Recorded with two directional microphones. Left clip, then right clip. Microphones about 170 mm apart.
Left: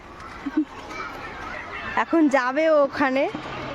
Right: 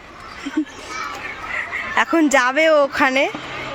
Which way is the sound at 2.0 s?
Centre (ahead or behind).